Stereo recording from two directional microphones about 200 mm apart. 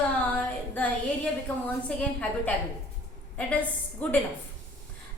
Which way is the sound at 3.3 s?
5° left (ahead or behind).